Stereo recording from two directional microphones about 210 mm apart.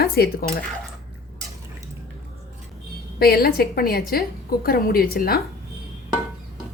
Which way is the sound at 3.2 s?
45° left (ahead or behind).